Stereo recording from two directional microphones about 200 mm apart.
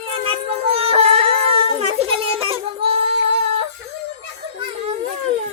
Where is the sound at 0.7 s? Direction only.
30° right (ahead or behind).